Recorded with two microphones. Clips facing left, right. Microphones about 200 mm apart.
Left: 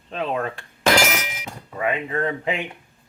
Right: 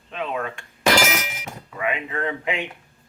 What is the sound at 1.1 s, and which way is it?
Clang, 5° right (ahead or behind).